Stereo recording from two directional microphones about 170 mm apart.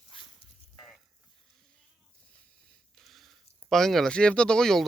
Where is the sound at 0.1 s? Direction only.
30° left (ahead or behind).